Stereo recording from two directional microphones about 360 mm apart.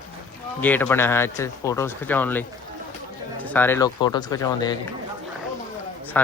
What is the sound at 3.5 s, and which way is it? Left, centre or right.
Speech, centre.